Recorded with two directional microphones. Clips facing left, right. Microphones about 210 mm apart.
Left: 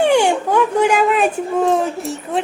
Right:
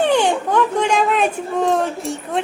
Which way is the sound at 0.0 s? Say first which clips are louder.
Left 2 dB; 10° left (ahead or behind).